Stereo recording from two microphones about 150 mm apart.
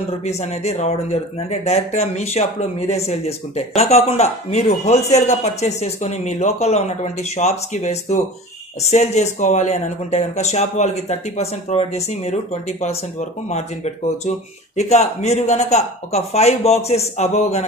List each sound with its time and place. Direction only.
0.2 s speech: 45° left (ahead or behind)